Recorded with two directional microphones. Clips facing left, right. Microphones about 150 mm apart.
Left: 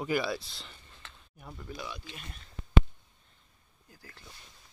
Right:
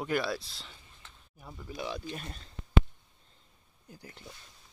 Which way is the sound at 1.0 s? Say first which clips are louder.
Left 4 dB; 90° left.